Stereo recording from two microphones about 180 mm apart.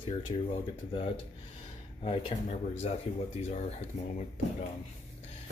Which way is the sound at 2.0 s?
30° left (ahead or behind).